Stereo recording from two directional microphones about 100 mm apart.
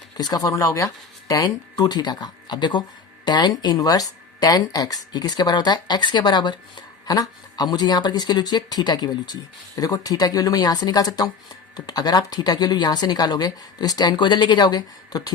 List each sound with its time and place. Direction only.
0.2 s speech: 40° left (ahead or behind)